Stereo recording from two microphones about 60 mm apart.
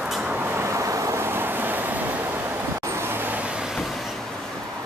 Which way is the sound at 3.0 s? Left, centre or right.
Right.